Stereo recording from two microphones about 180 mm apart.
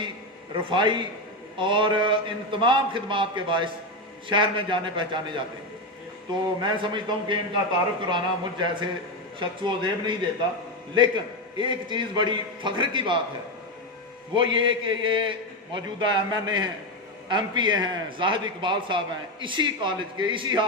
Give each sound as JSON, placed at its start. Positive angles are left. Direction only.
{"t": 0.5, "sound": "a man's voice", "side_deg": -25}
{"t": 6.4, "sound": "a man's voice", "side_deg": -25}
{"t": 14.3, "sound": "a man's voice", "side_deg": -25}